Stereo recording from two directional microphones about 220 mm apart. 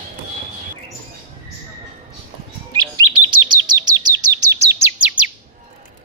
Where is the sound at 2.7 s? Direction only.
20° right (ahead or behind).